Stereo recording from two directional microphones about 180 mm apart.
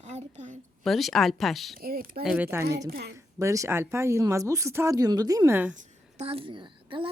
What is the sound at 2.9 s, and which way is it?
Speech, 65° right (ahead or behind).